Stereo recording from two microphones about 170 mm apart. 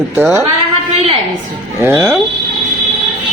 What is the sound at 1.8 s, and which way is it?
Speech, 15° right (ahead or behind).